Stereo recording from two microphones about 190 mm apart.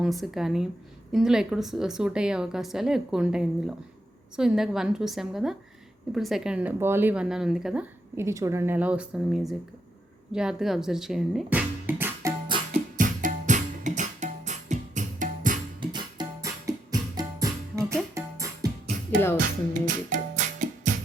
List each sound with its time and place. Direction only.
0.0 s a woman's voice: centre (ahead or behind)
12.5 s music: 25° right (ahead or behind)
13.0 s music: 45° right (ahead or behind)
15.8 s music: 25° right (ahead or behind)
19.8 s music: 45° right (ahead or behind)